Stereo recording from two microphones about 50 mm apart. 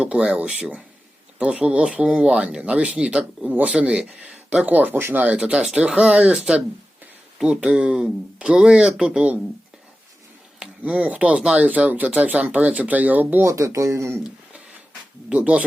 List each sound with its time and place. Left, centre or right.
0.0 s speech: right
4.7 s speech: right
5.4 s speech: centre
10.8 s speech: right
13.4 s speech: right
15.3 s speech: right